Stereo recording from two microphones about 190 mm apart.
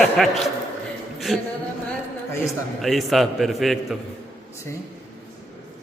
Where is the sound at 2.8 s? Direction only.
Centre (ahead or behind).